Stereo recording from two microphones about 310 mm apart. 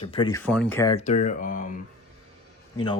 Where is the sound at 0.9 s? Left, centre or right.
Left.